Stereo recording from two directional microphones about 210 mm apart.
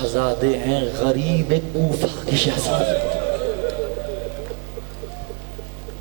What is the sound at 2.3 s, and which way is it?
Speech, 10° right (ahead or behind).